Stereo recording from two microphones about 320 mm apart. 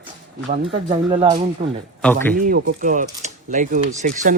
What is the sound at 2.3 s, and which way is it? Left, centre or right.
Speech, right.